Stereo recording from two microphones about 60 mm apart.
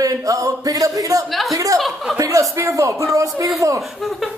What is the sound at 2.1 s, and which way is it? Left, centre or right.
Speech, right.